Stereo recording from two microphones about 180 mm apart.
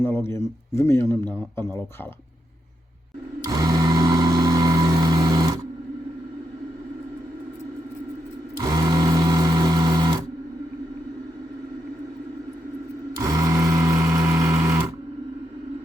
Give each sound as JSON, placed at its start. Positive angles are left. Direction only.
{"t": 0.0, "sound": "a man's voice", "side_deg": 15}
{"t": 3.4, "sound": "vehicle", "side_deg": -20}
{"t": 8.5, "sound": "sewing machine", "side_deg": -20}
{"t": 13.1, "sound": "sewing machine", "side_deg": -20}